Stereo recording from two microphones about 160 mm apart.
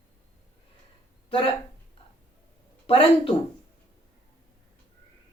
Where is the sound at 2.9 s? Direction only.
35° left (ahead or behind).